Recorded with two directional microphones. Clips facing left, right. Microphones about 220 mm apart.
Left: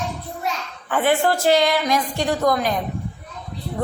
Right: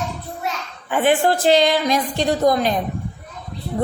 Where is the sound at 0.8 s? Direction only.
15° right (ahead or behind).